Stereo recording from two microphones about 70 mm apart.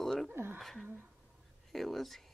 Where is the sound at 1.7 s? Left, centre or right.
Centre.